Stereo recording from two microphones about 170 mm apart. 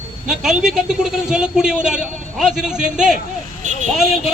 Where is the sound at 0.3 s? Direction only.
5° right (ahead or behind).